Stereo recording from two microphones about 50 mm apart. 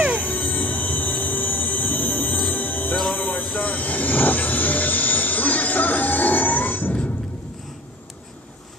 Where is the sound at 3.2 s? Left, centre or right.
Left.